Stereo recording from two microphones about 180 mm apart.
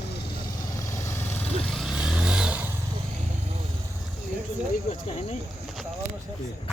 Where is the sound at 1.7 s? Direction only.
Centre (ahead or behind).